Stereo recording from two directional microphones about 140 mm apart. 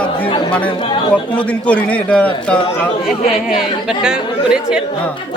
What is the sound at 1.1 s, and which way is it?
A man's voice, 10° left (ahead or behind).